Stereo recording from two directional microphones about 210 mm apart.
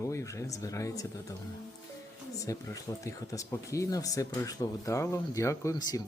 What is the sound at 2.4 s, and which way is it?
Speech, 15° left (ahead or behind).